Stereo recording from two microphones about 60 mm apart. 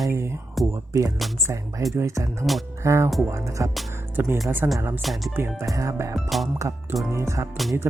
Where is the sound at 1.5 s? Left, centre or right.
Right.